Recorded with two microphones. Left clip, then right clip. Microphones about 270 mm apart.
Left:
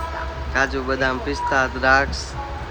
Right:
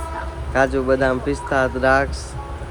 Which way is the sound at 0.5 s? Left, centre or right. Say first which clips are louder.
Right 4 dB; centre.